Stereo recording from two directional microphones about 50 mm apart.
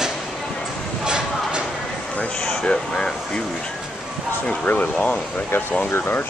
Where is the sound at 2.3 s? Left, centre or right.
Centre.